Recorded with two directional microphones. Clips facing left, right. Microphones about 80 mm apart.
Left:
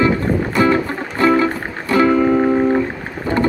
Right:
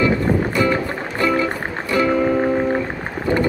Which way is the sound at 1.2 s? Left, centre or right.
Left.